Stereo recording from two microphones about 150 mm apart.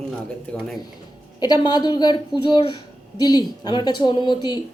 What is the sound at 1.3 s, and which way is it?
Speech, 25° left (ahead or behind).